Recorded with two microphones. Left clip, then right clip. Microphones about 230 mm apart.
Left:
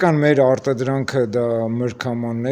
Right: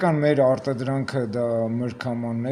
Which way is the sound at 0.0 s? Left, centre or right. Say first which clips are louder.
Left 4 dB; left.